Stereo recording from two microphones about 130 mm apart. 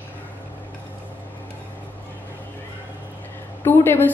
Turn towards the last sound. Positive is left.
turn(degrees=15)  # may be behind; listen again after turning